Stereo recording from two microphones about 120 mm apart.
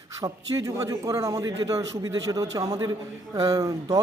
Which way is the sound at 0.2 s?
30° right (ahead or behind).